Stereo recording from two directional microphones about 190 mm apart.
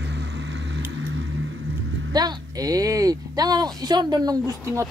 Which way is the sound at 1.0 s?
85° right.